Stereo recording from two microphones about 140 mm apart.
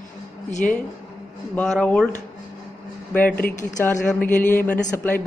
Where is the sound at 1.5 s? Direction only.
10° left (ahead or behind).